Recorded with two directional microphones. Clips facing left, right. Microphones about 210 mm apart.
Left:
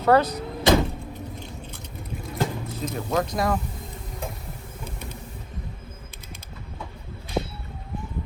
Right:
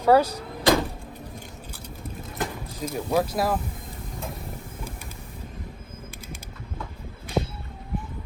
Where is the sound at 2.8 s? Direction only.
10° right (ahead or behind).